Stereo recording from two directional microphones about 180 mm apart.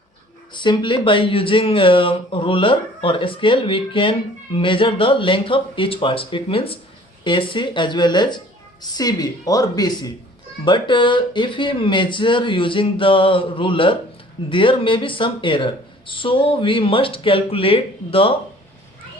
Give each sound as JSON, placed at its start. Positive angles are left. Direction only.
{"t": 0.5, "sound": "speech", "side_deg": 25}